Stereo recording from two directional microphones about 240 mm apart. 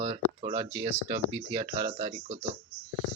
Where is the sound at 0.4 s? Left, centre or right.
Right.